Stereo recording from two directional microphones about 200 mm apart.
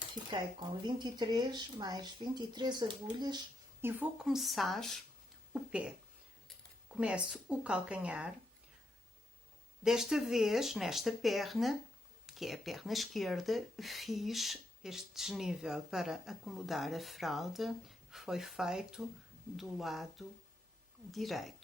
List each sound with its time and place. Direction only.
0.3 s speech: 25° right (ahead or behind); by 4.9 s centre (ahead or behind)
6.9 s speech: 5° right (ahead or behind)
9.8 s speech: centre (ahead or behind)